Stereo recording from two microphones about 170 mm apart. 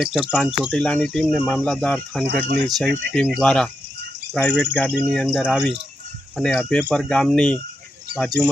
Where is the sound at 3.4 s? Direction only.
5° left (ahead or behind).